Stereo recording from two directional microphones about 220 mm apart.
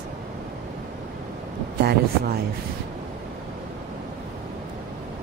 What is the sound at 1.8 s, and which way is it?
Speech, 45° right (ahead or behind).